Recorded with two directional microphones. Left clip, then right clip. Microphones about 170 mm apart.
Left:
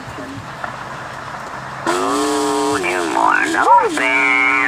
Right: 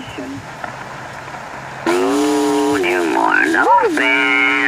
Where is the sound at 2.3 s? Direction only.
5° right (ahead or behind).